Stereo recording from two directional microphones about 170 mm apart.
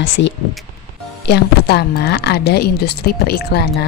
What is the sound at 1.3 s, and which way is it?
Speech, 75° left (ahead or behind).